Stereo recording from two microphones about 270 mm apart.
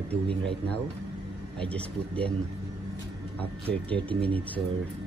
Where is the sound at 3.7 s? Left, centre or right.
Centre.